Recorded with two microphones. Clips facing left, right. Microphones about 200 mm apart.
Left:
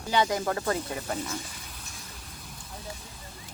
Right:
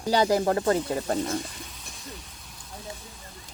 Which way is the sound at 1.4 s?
Centre (ahead or behind).